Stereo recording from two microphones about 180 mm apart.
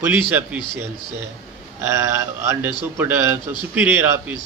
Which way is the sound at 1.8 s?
15° right (ahead or behind).